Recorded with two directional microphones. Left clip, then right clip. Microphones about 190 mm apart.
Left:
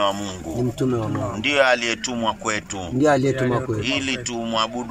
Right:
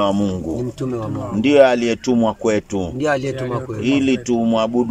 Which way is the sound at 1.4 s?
80° right.